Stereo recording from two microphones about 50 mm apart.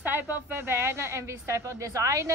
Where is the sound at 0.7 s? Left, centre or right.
Right.